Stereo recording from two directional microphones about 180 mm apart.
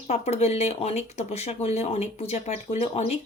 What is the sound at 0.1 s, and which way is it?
Speech, 35° left (ahead or behind).